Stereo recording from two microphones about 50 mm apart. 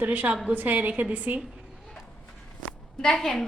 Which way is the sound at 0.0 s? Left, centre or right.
Right.